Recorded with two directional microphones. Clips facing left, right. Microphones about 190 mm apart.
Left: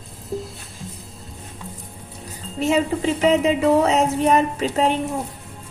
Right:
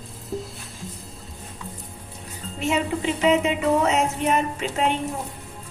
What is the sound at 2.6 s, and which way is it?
A woman's voice, 35° left (ahead or behind).